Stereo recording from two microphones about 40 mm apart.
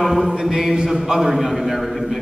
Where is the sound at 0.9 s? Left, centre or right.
Centre.